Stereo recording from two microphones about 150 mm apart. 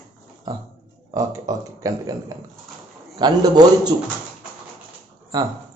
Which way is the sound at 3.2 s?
25° right (ahead or behind).